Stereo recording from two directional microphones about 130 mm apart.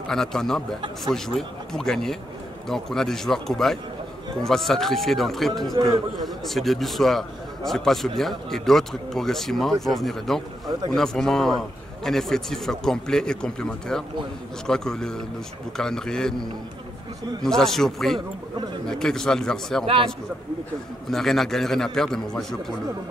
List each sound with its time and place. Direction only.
0.1 s a man's voice: 5° left (ahead or behind)
5.8 s a man's voice: 30° right (ahead or behind)
6.2 s a man's voice: centre (ahead or behind)
21.1 s a man's voice: centre (ahead or behind)